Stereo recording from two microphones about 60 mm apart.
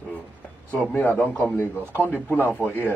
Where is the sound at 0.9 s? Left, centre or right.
Left.